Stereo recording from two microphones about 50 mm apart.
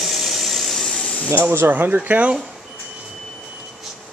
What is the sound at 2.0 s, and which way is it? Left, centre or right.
Speech, right.